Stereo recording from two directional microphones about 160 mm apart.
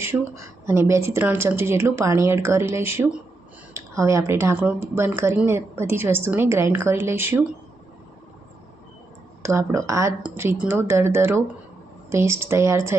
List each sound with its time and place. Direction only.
0.1 s speech: 15° right (ahead or behind)
9.4 s speech: 15° right (ahead or behind)